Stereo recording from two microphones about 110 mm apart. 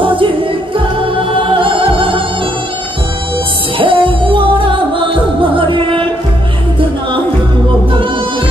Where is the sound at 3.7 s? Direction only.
50° right (ahead or behind).